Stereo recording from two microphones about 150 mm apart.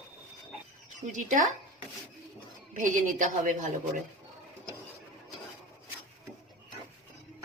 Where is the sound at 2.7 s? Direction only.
60° right (ahead or behind).